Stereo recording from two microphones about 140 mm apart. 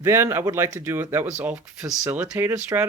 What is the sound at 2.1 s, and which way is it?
Speech, 15° right (ahead or behind).